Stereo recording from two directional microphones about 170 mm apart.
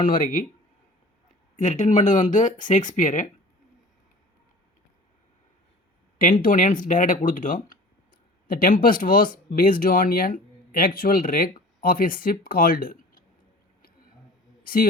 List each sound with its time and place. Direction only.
0.0 s speech: 55° left (ahead or behind)
1.5 s speech: 45° left (ahead or behind)
6.4 s speech: 50° left (ahead or behind)
14.6 s a sound: 55° left (ahead or behind)